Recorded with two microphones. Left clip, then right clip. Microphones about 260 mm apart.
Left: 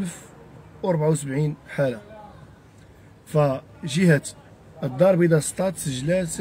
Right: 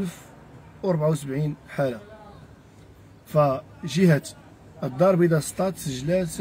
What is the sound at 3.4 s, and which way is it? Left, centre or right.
Speech, centre.